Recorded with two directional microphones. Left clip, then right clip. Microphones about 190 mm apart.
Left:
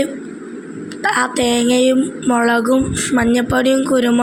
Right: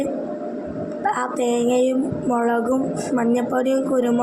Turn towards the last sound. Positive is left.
turn(degrees=45)  # may be behind; listen again after turning